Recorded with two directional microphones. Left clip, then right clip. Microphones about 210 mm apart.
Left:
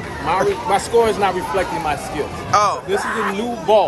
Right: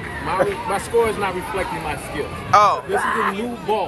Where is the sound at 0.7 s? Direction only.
50° left (ahead or behind).